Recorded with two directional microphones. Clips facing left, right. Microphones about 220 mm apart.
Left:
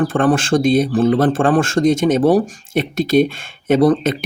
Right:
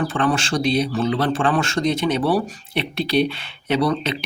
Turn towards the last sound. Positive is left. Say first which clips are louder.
# left 7 dB
turn(degrees=50)  # may be behind; listen again after turning